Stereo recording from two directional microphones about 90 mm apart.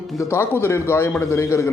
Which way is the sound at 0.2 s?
30° left (ahead or behind).